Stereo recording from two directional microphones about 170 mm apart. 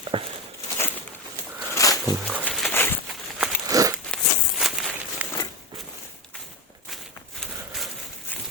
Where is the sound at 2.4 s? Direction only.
5° left (ahead or behind).